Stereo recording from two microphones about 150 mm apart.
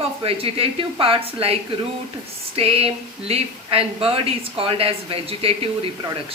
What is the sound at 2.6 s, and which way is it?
A woman's voice, 40° right (ahead or behind).